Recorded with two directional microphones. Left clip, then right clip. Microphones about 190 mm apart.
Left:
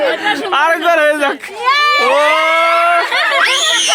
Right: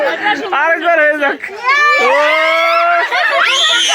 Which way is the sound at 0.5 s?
5° left (ahead or behind).